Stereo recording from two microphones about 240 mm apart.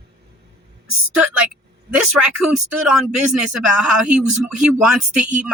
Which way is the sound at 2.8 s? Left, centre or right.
Centre.